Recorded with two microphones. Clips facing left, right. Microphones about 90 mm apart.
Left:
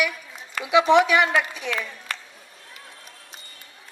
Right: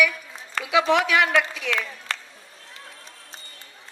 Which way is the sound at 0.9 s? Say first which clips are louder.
Left 4 dB; 25° left (ahead or behind).